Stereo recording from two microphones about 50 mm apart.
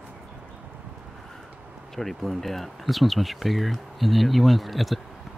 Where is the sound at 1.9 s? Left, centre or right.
Centre.